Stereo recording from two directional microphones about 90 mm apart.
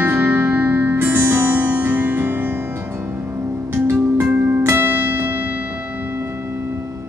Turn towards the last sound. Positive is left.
turn(degrees=-25)  # may be behind; listen again after turning